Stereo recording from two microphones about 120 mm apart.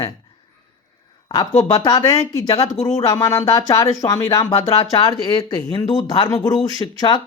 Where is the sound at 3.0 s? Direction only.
30° left (ahead or behind).